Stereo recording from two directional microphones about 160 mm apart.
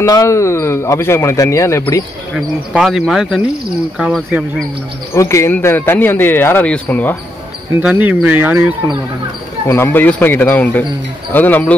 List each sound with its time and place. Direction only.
0.0 s speech: 20° left (ahead or behind)
2.3 s speech: centre (ahead or behind)
5.1 s speech: 15° left (ahead or behind)
7.8 s speech: 10° right (ahead or behind)
9.7 s speech: 15° left (ahead or behind)